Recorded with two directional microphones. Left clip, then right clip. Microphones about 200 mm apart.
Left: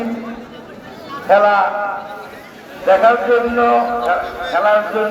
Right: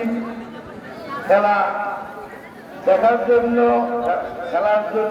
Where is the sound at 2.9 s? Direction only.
30° left (ahead or behind).